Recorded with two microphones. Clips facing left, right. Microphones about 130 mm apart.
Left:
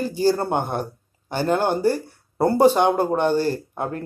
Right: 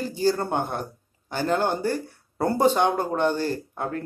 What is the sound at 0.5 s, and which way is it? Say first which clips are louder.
Speech: left 3 dB; 20° left (ahead or behind).